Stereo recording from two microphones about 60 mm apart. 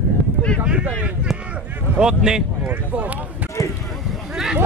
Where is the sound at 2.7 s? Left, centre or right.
Right.